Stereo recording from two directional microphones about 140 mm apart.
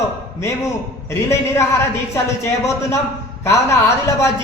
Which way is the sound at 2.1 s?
20° left (ahead or behind).